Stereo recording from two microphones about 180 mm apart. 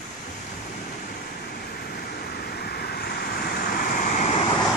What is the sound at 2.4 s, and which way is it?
Vehicle, 60° left (ahead or behind).